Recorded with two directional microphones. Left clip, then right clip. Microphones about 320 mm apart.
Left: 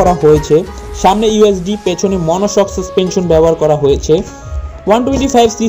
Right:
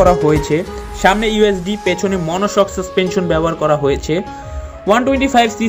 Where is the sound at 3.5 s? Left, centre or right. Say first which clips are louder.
Left 5 dB; right.